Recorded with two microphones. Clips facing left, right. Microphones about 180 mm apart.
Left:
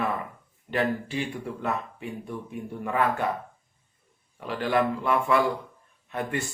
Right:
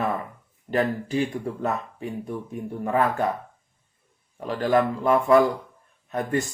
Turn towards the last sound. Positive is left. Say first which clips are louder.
# right 5 dB
turn(degrees=-40)  # may be behind; listen again after turning